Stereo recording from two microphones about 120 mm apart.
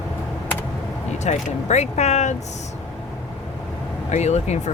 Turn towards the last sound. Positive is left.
turn(degrees=70)  # may be behind; listen again after turning